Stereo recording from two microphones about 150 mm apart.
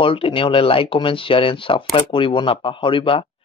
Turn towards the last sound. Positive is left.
turn(degrees=35)  # may be behind; listen again after turning